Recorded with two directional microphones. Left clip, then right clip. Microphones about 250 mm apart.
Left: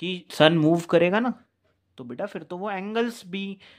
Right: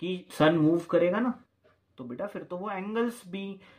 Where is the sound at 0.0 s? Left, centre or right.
Left.